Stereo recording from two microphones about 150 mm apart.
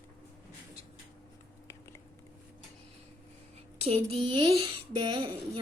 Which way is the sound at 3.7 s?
40° right (ahead or behind).